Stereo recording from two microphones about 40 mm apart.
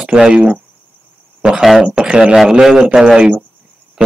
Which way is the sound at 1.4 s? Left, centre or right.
Centre.